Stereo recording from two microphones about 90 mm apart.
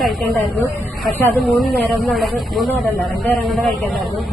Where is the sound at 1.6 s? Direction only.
Centre (ahead or behind).